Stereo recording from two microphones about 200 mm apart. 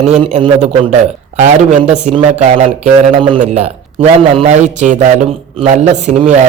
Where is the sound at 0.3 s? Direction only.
35° right (ahead or behind).